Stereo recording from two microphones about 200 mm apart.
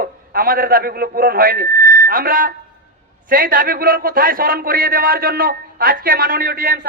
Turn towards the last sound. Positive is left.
turn(degrees=-50)  # may be behind; listen again after turning